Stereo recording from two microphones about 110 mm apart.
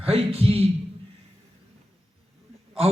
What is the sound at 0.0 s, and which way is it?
Speech, 65° right (ahead or behind).